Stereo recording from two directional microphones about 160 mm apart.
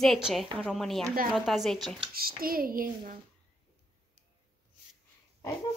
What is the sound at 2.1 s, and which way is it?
Speech, 65° right (ahead or behind).